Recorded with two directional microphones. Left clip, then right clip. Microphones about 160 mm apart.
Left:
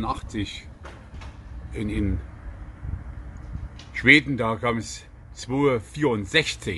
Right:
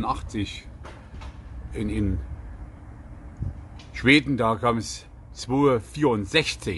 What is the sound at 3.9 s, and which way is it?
Speech, 10° right (ahead or behind).